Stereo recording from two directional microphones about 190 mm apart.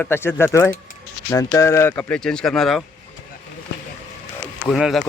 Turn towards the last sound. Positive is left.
turn(degrees=0)  # may be behind; listen again after turning